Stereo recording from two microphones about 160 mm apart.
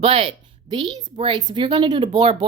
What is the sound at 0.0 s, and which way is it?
Speech, 35° right (ahead or behind).